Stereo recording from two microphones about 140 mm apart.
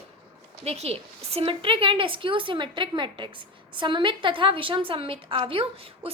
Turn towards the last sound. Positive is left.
turn(degrees=-45)  # may be behind; listen again after turning